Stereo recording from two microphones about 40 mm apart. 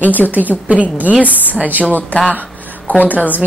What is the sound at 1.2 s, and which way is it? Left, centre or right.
Speech, left.